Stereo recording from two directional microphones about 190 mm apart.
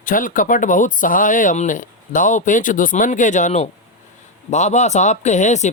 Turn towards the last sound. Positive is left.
turn(degrees=40)  # may be behind; listen again after turning